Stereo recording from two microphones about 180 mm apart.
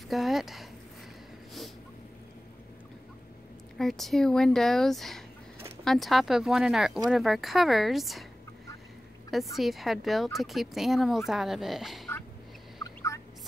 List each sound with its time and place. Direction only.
0.1 s speech: centre (ahead or behind)
3.7 s speech: centre (ahead or behind)
9.3 s speech: centre (ahead or behind)
12.7 s turkey: 20° left (ahead or behind)